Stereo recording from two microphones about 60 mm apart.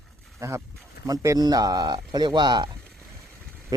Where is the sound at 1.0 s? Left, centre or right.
Right.